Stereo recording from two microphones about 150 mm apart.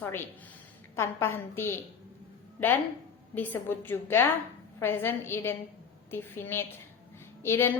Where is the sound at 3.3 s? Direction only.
15° left (ahead or behind).